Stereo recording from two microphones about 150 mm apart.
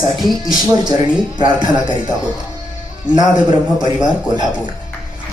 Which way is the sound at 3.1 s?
30° right (ahead or behind).